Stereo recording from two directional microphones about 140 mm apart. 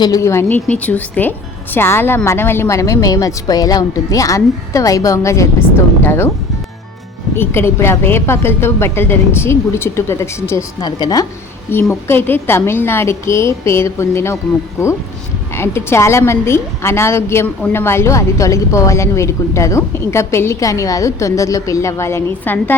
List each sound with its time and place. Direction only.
0.0 s a woman's voice: 25° left (ahead or behind)
7.3 s a woman's voice: 15° left (ahead or behind)
11.7 s a woman's voice: 15° left (ahead or behind)
15.5 s a woman's voice: 20° left (ahead or behind)